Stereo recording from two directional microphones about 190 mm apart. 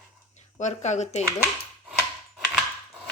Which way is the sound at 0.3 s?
35° left (ahead or behind).